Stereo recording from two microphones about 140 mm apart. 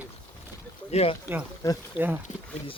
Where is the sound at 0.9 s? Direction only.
45° left (ahead or behind).